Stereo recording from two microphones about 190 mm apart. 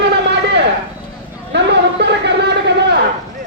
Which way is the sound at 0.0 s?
65° right (ahead or behind).